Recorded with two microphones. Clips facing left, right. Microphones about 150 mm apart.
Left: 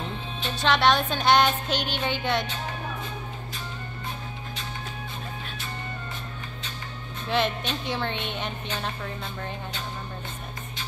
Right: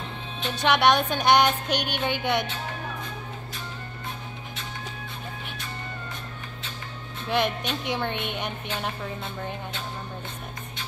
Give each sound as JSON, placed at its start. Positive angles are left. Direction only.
{"t": 0.5, "sound": "speech", "side_deg": -15}
{"t": 7.2, "sound": "speech", "side_deg": -10}